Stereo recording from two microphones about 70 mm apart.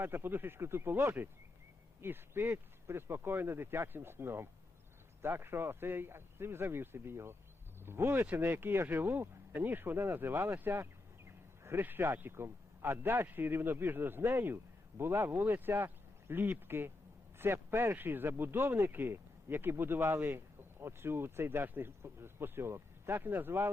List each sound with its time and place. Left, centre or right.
0.0 s speech: right